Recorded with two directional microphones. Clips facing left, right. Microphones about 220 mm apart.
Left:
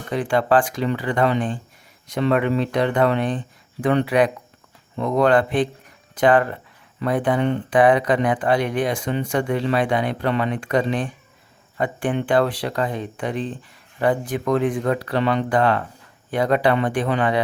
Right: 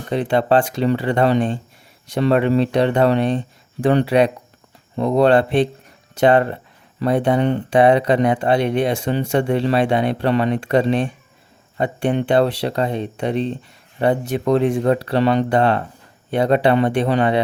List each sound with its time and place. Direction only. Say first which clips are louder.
0.1 s speech: right 2 dB; 25° right (ahead or behind)